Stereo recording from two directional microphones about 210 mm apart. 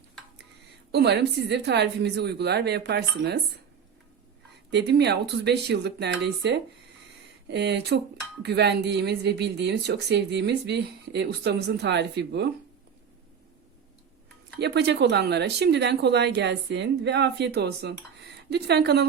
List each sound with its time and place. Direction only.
0.9 s speech: 55° right (ahead or behind)
4.7 s speech: 55° right (ahead or behind)
14.6 s speech: 50° right (ahead or behind)